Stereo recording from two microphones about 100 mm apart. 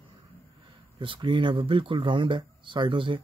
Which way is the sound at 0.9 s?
55° right (ahead or behind).